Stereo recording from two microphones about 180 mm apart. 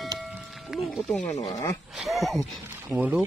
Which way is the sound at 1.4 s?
15° left (ahead or behind).